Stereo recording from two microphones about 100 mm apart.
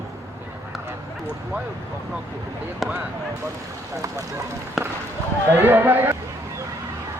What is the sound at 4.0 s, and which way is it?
Speech, 30° right (ahead or behind).